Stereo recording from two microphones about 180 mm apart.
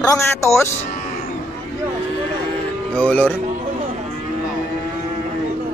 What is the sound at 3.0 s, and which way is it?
Speech, 10° left (ahead or behind).